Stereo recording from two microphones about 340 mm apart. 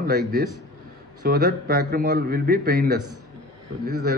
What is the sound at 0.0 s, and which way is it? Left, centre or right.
A man's voice, right.